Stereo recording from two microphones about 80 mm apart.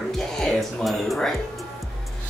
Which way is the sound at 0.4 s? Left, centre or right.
Centre.